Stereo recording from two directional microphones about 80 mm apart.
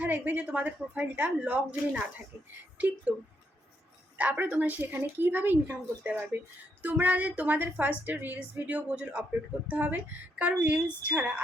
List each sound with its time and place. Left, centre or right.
0.0 s a woman's voice: right
4.2 s a woman's voice: centre